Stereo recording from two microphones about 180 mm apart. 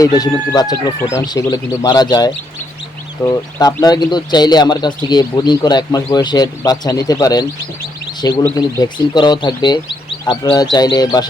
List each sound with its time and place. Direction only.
0.0 s speech: 20° left (ahead or behind)